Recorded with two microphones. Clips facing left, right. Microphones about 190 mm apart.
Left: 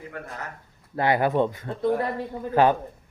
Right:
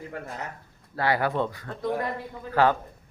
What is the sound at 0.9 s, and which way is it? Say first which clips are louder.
Speech: left 4 dB; 20° left (ahead or behind).